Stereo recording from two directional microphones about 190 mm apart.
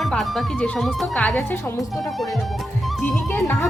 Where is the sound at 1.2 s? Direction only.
10° left (ahead or behind).